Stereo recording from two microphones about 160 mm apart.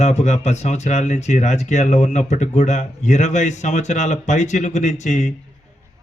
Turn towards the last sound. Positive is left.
turn(degrees=50)  # may be behind; listen again after turning